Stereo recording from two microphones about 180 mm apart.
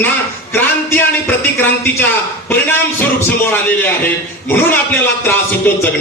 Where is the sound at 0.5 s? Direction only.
10° left (ahead or behind).